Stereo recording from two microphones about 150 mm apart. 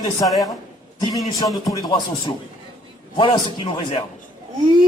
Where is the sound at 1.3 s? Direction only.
25° left (ahead or behind).